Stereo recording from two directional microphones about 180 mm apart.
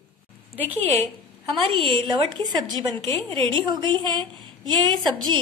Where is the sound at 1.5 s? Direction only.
30° right (ahead or behind).